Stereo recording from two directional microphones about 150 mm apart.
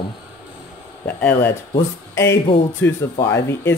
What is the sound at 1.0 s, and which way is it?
Speech, 10° left (ahead or behind).